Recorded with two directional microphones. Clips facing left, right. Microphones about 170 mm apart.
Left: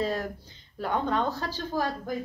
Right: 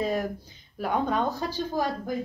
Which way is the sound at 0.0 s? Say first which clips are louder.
Right 2 dB; 15° right (ahead or behind).